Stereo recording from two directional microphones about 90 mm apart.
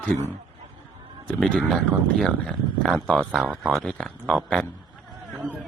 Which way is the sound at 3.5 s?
15° right (ahead or behind).